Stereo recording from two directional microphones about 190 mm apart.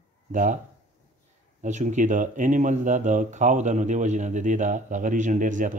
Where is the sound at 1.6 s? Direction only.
40° right (ahead or behind).